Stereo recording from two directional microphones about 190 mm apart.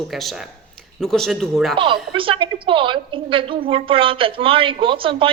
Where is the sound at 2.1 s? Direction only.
25° right (ahead or behind).